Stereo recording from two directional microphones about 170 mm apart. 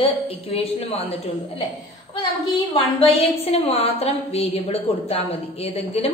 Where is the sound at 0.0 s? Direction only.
35° left (ahead or behind).